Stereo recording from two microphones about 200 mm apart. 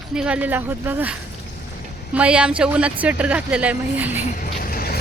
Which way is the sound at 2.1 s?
5° right (ahead or behind).